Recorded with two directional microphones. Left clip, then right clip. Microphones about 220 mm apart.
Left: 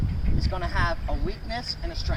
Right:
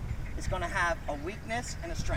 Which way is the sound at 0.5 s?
5° right (ahead or behind).